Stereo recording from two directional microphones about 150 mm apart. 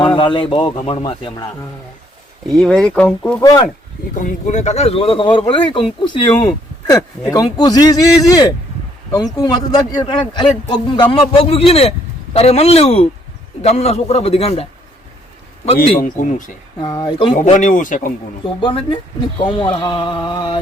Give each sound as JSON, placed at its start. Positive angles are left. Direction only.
{"t": 0.0, "sound": "a man's voice", "side_deg": 35}
{"t": 2.6, "sound": "speech", "side_deg": 5}
{"t": 4.1, "sound": "a man's voice", "side_deg": 60}
{"t": 16.0, "sound": "speech", "side_deg": 60}
{"t": 16.8, "sound": "speech", "side_deg": 25}
{"t": 17.3, "sound": "speech", "side_deg": 55}
{"t": 18.4, "sound": "speech", "side_deg": 35}